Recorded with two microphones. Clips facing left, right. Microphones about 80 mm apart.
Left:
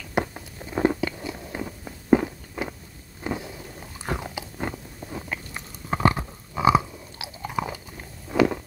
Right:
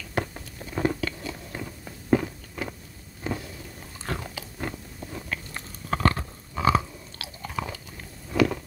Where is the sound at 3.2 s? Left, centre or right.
Left.